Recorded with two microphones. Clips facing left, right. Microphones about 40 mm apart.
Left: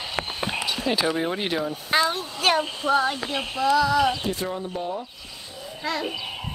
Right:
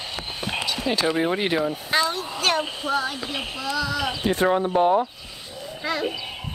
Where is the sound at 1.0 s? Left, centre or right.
Centre.